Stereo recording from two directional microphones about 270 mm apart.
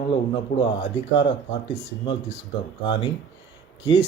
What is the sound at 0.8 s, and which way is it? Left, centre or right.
Speech, left.